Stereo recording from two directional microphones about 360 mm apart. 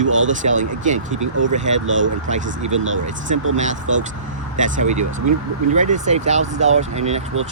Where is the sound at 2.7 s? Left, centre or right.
Right.